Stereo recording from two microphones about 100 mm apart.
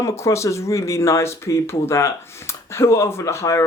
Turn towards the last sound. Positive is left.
turn(degrees=30)  # may be behind; listen again after turning